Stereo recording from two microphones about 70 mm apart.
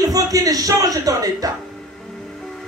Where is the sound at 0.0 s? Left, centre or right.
Right.